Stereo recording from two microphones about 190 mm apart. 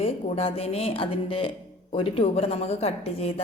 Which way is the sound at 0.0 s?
30° left (ahead or behind).